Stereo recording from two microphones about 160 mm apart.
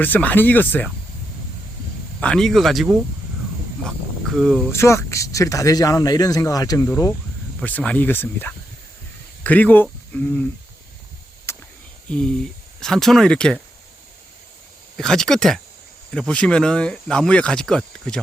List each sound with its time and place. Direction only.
0.0 s speech: 10° left (ahead or behind)
2.2 s speech: 5° left (ahead or behind)
4.7 s speech: 15° left (ahead or behind)
11.5 s a sound: 15° left (ahead or behind)
12.0 s speech: 5° left (ahead or behind)
14.9 s speech: 5° left (ahead or behind)